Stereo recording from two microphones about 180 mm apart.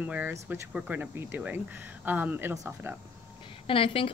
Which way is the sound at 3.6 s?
30° left (ahead or behind).